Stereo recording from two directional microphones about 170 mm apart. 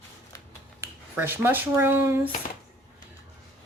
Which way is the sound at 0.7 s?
15° right (ahead or behind).